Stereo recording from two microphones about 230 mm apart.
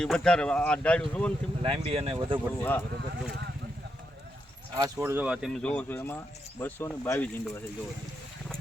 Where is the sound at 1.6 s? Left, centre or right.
Right.